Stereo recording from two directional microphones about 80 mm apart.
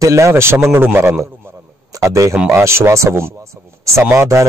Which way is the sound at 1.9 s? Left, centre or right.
Right.